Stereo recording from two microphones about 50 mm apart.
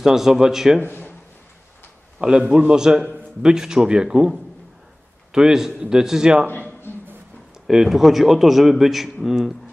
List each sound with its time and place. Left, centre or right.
0.0 s a man's voice: centre
0.8 s speech: left
2.1 s a man's voice: centre
7.6 s a man's voice: centre